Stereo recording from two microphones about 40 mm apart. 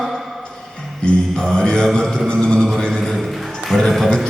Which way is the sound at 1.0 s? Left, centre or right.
Centre.